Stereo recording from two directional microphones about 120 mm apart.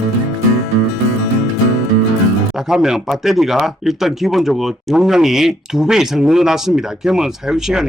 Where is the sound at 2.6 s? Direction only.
5° right (ahead or behind).